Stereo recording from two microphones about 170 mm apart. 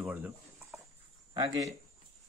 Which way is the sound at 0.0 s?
10° right (ahead or behind).